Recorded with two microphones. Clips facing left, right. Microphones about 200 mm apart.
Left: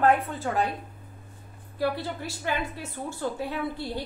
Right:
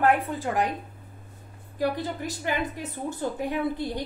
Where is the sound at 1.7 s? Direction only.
15° right (ahead or behind).